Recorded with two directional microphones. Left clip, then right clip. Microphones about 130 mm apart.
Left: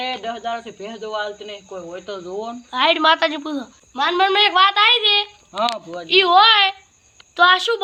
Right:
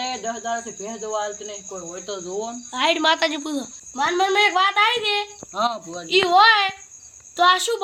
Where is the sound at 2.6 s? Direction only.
25° right (ahead or behind).